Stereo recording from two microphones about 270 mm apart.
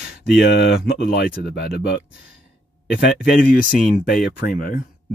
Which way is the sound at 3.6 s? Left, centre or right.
Left.